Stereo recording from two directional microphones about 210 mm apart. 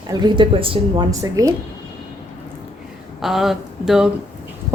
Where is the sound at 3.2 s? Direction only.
Centre (ahead or behind).